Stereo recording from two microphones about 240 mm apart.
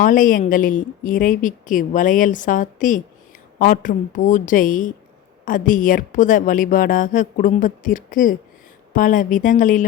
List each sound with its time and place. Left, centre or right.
0.0 s a woman's voice: left